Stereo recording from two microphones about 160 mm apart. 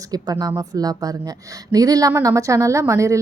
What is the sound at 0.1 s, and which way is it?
Speech, 25° right (ahead or behind).